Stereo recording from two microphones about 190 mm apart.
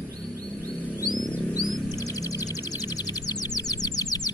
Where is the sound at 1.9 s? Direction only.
20° left (ahead or behind).